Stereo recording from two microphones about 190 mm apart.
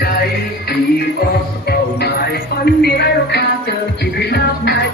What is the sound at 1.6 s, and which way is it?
Music, 55° left (ahead or behind).